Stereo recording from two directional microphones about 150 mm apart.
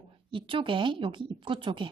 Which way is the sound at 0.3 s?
35° right (ahead or behind).